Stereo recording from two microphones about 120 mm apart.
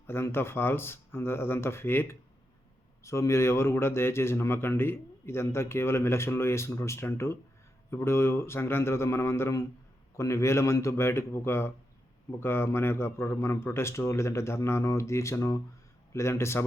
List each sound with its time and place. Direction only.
0.1 s speech: 20° left (ahead or behind)